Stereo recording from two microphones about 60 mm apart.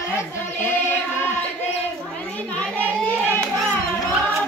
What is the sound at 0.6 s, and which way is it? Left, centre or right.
Music, left.